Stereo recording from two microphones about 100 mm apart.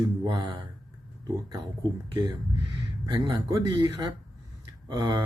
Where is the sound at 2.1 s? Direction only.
45° right (ahead or behind).